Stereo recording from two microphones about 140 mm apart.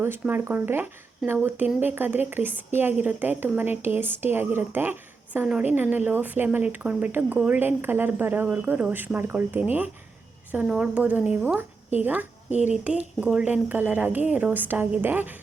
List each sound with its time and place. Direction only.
0.0 s speech: 15° right (ahead or behind)
12.5 s speech: 55° left (ahead or behind)
12.7 s speech: 10° right (ahead or behind)